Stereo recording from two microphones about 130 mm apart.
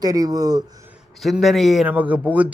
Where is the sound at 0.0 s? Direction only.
30° right (ahead or behind).